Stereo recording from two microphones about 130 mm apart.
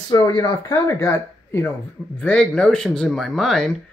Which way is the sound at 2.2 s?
5° left (ahead or behind).